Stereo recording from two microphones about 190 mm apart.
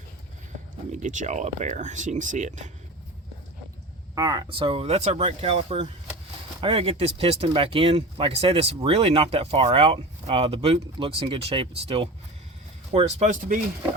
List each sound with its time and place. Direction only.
0.9 s speech: 40° right (ahead or behind)
4.1 s speech: 20° right (ahead or behind); by 13.6 s 40° right (ahead or behind)